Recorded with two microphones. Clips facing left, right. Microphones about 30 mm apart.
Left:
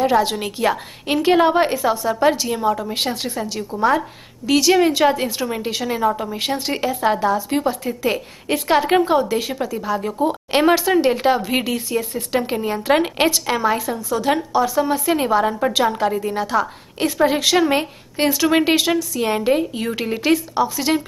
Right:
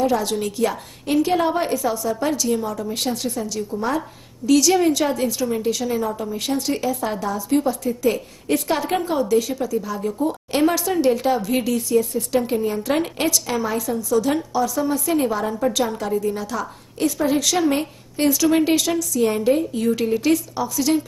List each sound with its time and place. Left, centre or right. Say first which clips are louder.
0.0 s a woman's voice: left 3 dB; left